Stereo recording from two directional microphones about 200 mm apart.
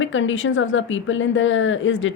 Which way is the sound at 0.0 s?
75° left (ahead or behind).